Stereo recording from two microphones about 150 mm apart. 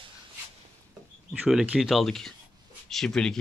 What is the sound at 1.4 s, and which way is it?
Speech, 5° right (ahead or behind).